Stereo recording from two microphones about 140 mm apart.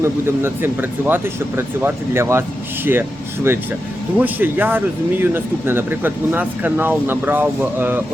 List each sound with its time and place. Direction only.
0.0 s speech: 15° right (ahead or behind)
3.5 s speech: 15° right (ahead or behind)